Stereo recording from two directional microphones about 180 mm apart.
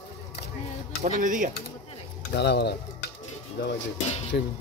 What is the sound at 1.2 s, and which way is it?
Speech, 45° right (ahead or behind).